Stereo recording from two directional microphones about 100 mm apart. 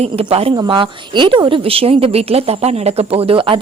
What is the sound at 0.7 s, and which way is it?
Speech, 55° right (ahead or behind).